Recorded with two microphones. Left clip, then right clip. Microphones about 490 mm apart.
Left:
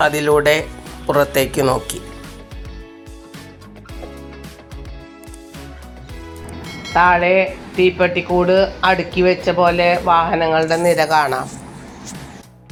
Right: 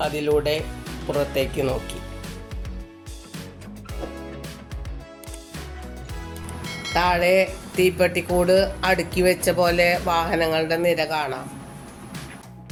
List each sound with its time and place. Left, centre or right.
0.0 s speech: right
6.7 s music: centre
6.9 s speech: right